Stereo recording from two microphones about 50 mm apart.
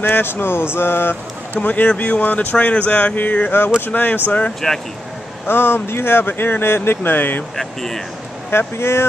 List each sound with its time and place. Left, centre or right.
0.0 s speech: left
1.6 s speech: left
4.5 s speech: centre
5.5 s speech: left
7.5 s speech: centre
8.5 s speech: left